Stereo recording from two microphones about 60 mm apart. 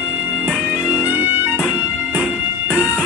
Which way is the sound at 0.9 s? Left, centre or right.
Right.